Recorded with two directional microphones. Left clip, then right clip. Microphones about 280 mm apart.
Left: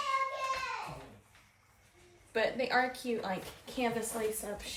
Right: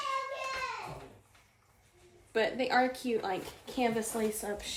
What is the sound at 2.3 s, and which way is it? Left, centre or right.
A woman's voice, centre.